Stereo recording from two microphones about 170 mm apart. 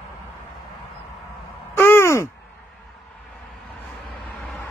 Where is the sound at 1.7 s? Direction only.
15° left (ahead or behind).